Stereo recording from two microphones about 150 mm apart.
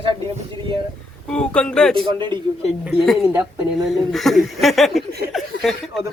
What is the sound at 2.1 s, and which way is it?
Speech, 30° right (ahead or behind).